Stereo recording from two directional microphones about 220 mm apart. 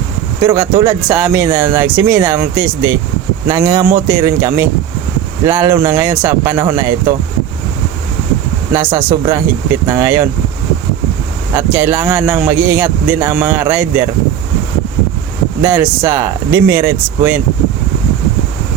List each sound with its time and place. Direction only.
0.4 s speech: 15° right (ahead or behind)
8.7 s speech: 10° right (ahead or behind)
9.0 s speech: 20° right (ahead or behind)
9.8 s speech: 10° right (ahead or behind)
11.5 s speech: 10° right (ahead or behind)
15.6 s speech: 15° right (ahead or behind)